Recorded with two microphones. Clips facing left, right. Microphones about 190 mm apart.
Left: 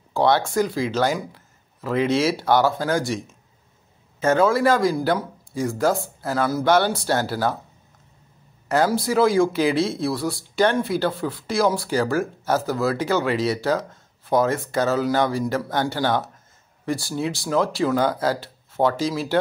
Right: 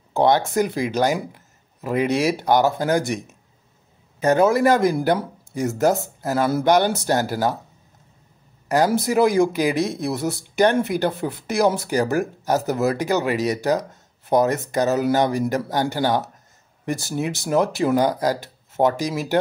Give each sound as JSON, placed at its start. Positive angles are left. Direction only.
{"t": 0.1, "sound": "speech", "side_deg": -20}
{"t": 8.6, "sound": "speech", "side_deg": -15}